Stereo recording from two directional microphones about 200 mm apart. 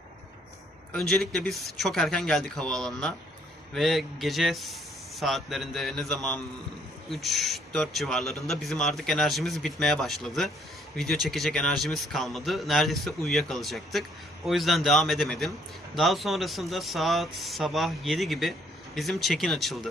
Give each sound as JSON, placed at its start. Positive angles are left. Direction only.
{"t": 0.9, "sound": "speech", "side_deg": 0}